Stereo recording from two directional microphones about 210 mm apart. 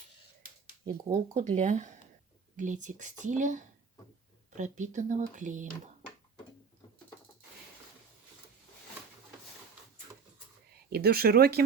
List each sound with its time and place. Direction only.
1.1 s speech: 35° right (ahead or behind)
10.8 s speech: 50° right (ahead or behind)